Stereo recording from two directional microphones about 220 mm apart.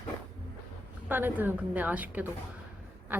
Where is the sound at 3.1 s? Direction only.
5° right (ahead or behind).